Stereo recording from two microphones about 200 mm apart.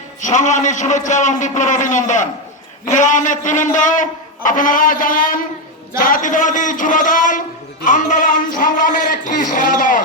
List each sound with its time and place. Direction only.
0.2 s a man's voice: 35° left (ahead or behind)